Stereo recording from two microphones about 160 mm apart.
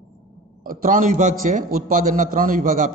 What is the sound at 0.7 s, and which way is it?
A man's voice, 60° right (ahead or behind).